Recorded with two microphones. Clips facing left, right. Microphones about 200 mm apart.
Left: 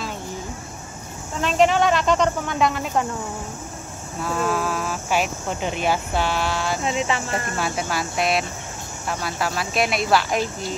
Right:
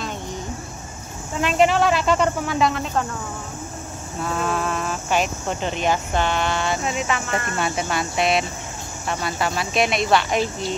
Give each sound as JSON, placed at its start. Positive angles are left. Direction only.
{"t": 1.4, "sound": "speech", "side_deg": -5}
{"t": 4.2, "sound": "speech", "side_deg": 0}
{"t": 6.8, "sound": "speech", "side_deg": 30}
{"t": 7.5, "sound": "speech", "side_deg": 0}